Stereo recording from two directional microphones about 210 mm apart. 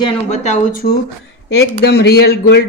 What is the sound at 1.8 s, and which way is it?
Speech, 50° left (ahead or behind).